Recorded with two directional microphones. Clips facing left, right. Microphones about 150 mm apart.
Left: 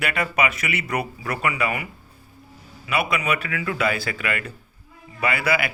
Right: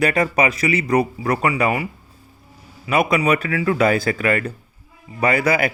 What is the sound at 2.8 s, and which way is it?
Speech, 40° right (ahead or behind).